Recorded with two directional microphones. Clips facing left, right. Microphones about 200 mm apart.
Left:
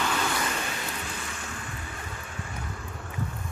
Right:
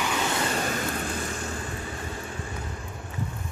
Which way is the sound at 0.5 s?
45° right (ahead or behind).